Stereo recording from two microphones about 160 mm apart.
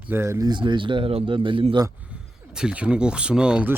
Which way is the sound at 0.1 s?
15° right (ahead or behind).